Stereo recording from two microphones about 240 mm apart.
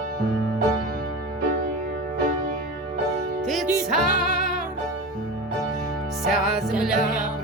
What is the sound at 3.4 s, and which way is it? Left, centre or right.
Music, centre.